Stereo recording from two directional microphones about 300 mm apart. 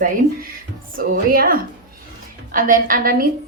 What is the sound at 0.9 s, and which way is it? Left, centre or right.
A woman's voice, right.